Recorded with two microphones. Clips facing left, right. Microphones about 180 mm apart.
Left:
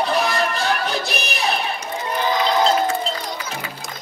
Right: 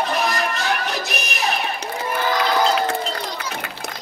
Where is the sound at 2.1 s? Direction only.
20° left (ahead or behind).